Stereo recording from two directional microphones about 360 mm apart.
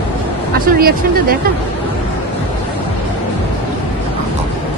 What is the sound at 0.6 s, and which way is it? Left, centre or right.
Speech, right.